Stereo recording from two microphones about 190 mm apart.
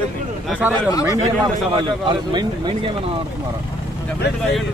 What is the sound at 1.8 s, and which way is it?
A man's voice, 25° right (ahead or behind).